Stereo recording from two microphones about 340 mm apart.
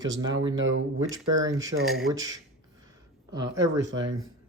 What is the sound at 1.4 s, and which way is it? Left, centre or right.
Speech, centre.